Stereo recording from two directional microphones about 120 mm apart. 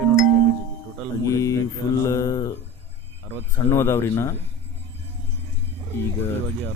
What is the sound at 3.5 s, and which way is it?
Speech, 20° left (ahead or behind).